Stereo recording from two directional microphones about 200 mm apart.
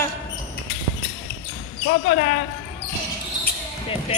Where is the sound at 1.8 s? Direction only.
50° left (ahead or behind).